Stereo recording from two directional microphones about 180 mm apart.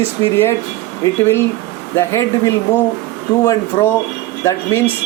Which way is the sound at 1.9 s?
15° left (ahead or behind).